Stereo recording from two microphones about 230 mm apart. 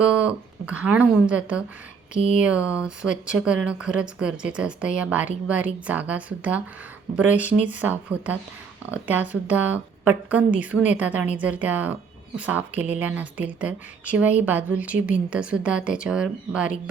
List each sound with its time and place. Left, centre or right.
0.0 s speech: centre